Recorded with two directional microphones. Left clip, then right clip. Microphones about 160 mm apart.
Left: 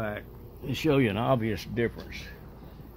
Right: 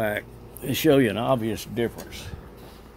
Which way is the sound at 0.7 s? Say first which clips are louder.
Right 6 dB; 5° right (ahead or behind).